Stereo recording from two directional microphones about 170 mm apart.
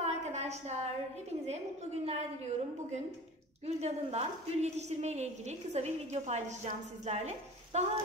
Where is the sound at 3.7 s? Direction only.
40° right (ahead or behind).